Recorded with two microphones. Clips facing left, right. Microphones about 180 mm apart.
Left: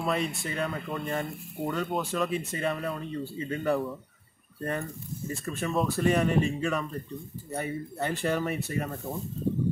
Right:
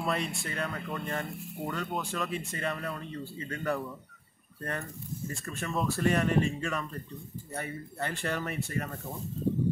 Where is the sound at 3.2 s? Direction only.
25° left (ahead or behind).